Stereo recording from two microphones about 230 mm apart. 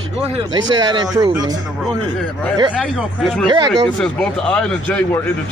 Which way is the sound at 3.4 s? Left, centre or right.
Centre.